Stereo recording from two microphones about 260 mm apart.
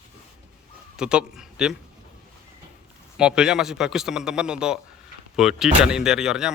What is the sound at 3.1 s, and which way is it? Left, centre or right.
Speech, centre.